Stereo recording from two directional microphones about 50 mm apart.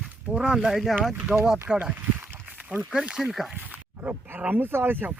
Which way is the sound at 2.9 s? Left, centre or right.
Centre.